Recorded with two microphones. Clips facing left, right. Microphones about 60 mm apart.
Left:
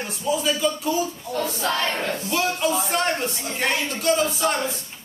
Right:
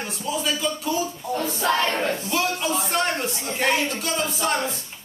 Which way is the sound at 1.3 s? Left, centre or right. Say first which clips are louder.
Right 3 dB; right.